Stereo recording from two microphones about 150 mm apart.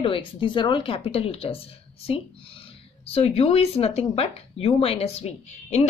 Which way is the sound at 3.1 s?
45° left (ahead or behind).